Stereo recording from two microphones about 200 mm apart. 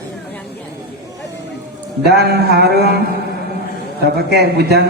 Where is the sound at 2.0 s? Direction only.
55° right (ahead or behind).